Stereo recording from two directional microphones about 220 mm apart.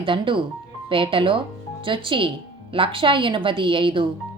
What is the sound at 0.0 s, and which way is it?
Speech, 25° right (ahead or behind).